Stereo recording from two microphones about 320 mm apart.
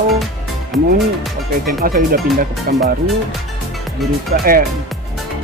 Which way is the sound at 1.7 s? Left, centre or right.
Right.